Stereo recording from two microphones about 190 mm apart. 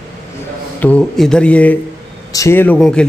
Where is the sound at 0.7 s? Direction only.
5° left (ahead or behind).